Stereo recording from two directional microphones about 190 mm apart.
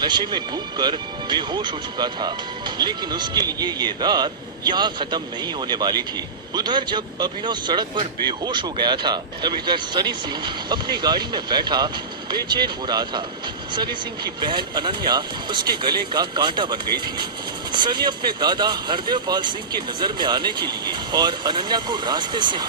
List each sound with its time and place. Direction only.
0.0 s speech: 25° right (ahead or behind)
14.4 s speech: 25° right (ahead or behind)